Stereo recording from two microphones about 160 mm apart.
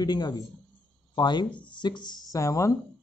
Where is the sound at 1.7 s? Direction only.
30° left (ahead or behind).